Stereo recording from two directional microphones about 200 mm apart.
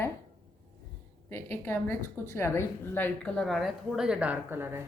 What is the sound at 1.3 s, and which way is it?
A woman's voice, 10° left (ahead or behind).